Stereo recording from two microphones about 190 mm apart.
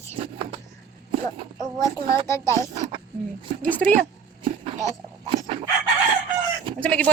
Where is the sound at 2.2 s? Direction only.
15° left (ahead or behind).